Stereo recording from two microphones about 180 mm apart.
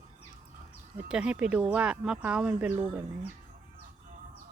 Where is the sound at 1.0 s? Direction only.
5° right (ahead or behind).